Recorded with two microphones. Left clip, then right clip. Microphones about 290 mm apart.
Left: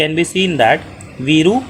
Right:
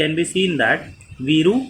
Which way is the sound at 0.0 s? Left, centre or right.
Centre.